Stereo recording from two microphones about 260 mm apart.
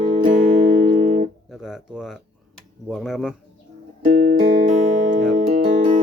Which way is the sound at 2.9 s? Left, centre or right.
Centre.